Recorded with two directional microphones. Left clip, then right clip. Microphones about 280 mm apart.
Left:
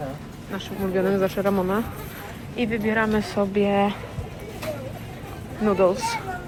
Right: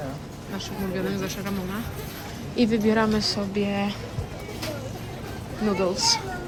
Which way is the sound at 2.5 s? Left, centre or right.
Centre.